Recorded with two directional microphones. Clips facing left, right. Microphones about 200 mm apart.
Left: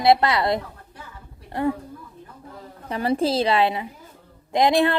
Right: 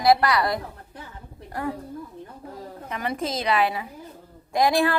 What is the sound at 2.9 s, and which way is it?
A woman's voice, 30° left (ahead or behind).